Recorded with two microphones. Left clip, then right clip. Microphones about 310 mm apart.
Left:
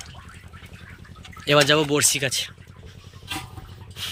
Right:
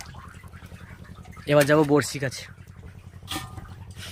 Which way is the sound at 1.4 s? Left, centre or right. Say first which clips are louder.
Left 1 dB; centre.